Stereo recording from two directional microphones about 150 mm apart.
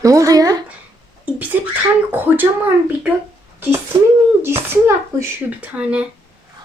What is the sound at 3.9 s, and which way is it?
Speech, 20° right (ahead or behind).